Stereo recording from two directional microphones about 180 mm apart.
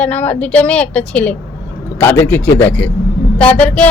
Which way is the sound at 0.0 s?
10° left (ahead or behind).